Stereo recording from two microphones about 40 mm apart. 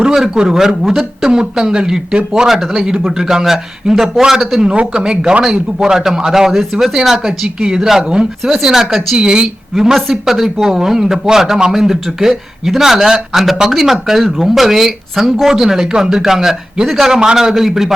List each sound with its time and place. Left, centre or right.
0.0 s a sound: centre
0.4 s speech: centre
4.7 s speech: right
6.5 s speech: centre; by 8.3 s right
8.6 s speech: centre
9.1 s speech: centre
9.7 s speech: centre